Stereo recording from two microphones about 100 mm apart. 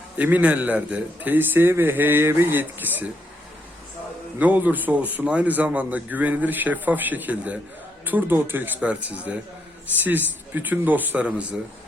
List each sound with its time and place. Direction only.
0.2 s a man's voice: 15° right (ahead or behind)
4.4 s a man's voice: 15° right (ahead or behind)